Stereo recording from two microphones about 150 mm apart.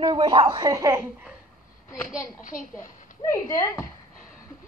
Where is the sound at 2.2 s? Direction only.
60° left (ahead or behind).